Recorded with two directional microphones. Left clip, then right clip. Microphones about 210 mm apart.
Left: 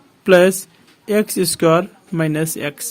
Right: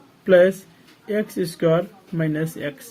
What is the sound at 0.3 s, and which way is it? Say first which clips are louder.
Speech: left 3 dB; 50° left (ahead or behind).